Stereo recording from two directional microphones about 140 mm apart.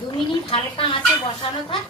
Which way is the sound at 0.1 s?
40° left (ahead or behind).